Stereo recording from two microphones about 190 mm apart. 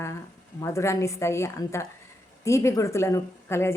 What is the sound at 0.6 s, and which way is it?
Speech, 15° left (ahead or behind).